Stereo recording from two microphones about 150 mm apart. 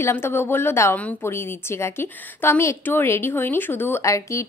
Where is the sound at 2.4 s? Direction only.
15° left (ahead or behind).